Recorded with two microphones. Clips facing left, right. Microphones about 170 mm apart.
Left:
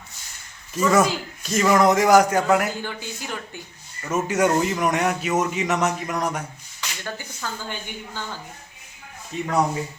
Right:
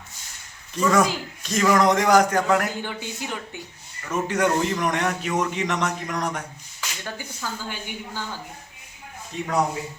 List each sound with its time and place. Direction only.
0.7 s a man's voice: 5° left (ahead or behind)
2.8 s speech: 20° right (ahead or behind)
4.1 s a man's voice: 5° left (ahead or behind)
7.0 s speech: 5° right (ahead or behind)
9.3 s a man's voice: centre (ahead or behind)